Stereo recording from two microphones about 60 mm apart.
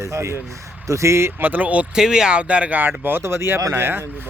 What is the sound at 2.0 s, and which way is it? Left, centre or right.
Speech, centre.